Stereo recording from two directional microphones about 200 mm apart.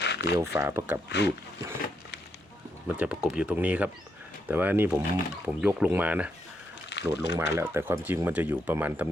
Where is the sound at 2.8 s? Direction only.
5° right (ahead or behind).